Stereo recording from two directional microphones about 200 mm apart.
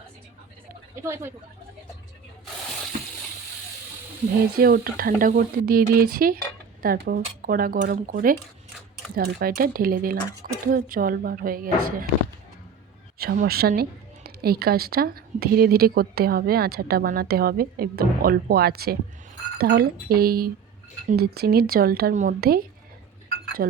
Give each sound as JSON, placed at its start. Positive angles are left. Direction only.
{"t": 1.0, "sound": "speech", "side_deg": -15}
{"t": 4.5, "sound": "a woman's voice", "side_deg": -50}
{"t": 13.1, "sound": "a woman's voice", "side_deg": -50}